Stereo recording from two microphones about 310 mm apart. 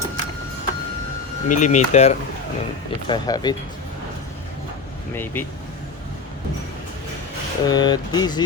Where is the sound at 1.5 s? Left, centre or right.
Left.